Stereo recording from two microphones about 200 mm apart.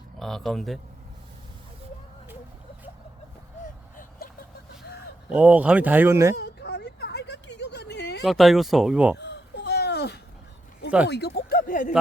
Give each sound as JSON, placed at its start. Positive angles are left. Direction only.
{"t": 0.2, "sound": "speech", "side_deg": 0}
{"t": 5.3, "sound": "speech", "side_deg": -5}
{"t": 6.3, "sound": "a sound", "side_deg": 55}
{"t": 8.2, "sound": "speech", "side_deg": 0}
{"t": 9.1, "sound": "baby cry", "side_deg": 60}
{"t": 11.1, "sound": "speech", "side_deg": 50}